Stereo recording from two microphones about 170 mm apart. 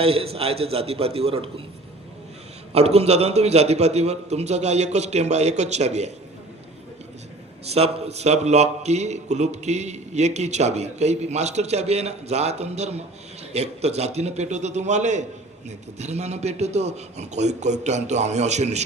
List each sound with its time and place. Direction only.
0.0 s a man's voice: 35° right (ahead or behind)
2.7 s a man's voice: 40° right (ahead or behind)
7.6 s a man's voice: 35° right (ahead or behind)